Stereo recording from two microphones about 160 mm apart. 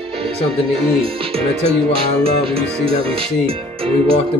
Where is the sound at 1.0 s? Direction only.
35° right (ahead or behind).